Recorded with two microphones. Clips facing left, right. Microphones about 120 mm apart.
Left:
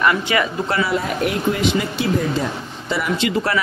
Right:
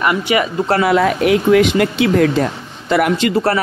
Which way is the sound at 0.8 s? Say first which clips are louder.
Right 8 dB; 90° right.